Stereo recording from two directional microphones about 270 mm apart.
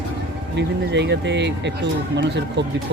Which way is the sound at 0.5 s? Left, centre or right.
Right.